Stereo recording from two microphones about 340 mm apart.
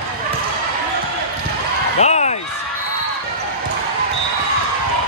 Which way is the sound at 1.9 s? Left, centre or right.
Centre.